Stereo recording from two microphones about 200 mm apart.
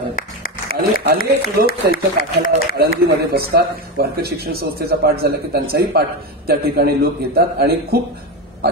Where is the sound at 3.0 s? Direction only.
50° right (ahead or behind).